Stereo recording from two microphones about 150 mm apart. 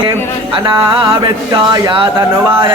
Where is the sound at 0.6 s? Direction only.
30° right (ahead or behind).